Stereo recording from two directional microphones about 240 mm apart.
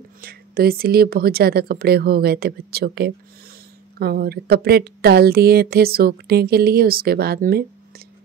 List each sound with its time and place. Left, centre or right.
0.2 s a woman's voice: right